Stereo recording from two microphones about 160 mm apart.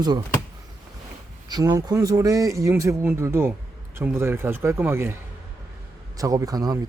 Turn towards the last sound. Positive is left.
turn(degrees=-25)  # may be behind; listen again after turning